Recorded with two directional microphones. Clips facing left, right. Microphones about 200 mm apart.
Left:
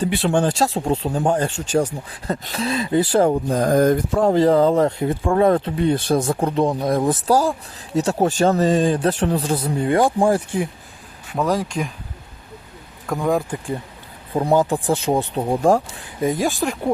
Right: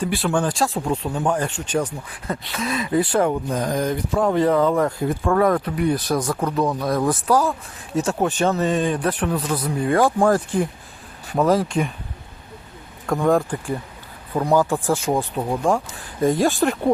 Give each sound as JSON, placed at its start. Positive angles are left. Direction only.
{"t": 0.0, "sound": "speech", "side_deg": 25}
{"t": 4.3, "sound": "speech", "side_deg": 30}
{"t": 11.3, "sound": "speech", "side_deg": 0}
{"t": 13.1, "sound": "speech", "side_deg": 0}
{"t": 14.3, "sound": "speech", "side_deg": 20}
{"t": 16.2, "sound": "speech", "side_deg": 0}